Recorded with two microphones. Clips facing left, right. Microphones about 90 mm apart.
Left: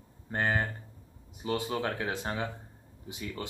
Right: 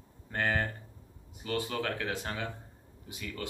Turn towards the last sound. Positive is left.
turn(degrees=25)  # may be behind; listen again after turning